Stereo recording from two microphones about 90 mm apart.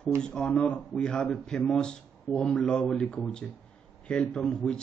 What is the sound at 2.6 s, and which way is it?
Speech, 15° left (ahead or behind).